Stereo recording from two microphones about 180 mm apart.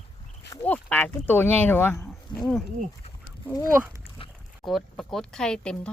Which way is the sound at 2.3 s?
25° left (ahead or behind).